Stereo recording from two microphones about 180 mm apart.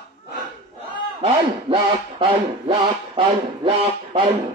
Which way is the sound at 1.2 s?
30° right (ahead or behind).